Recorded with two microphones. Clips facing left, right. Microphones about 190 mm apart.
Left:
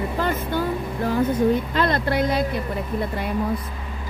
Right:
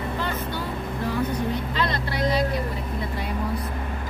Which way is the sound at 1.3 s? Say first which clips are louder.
Left 7 dB; 50° left (ahead or behind).